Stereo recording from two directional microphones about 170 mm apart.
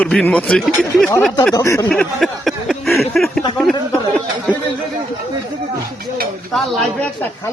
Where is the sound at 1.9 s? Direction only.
Centre (ahead or behind).